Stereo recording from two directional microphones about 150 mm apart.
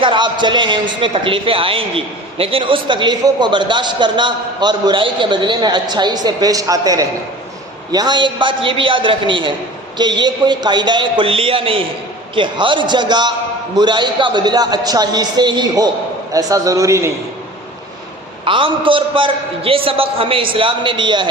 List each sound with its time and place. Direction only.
0.0 s a man's voice: 30° right (ahead or behind)
18.4 s a man's voice: 35° right (ahead or behind)